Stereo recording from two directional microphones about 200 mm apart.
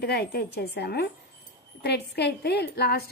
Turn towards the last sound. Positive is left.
turn(degrees=55)  # may be behind; listen again after turning